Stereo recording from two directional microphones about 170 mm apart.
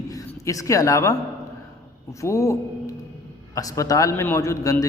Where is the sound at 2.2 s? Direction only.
20° left (ahead or behind).